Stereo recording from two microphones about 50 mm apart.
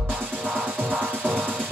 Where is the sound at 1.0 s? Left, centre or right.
Centre.